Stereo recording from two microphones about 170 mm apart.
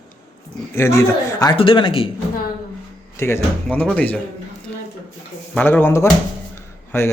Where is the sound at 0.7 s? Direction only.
15° left (ahead or behind).